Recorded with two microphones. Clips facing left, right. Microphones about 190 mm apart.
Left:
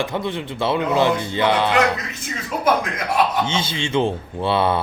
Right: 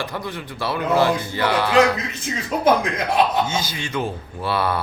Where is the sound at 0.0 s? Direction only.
25° left (ahead or behind).